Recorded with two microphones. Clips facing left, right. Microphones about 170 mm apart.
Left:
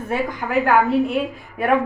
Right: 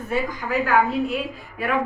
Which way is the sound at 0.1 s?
55° left (ahead or behind).